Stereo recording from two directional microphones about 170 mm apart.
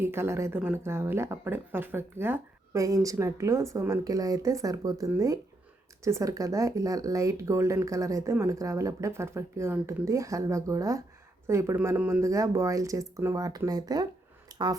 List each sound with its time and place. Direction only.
0.0 s speech: 15° right (ahead or behind)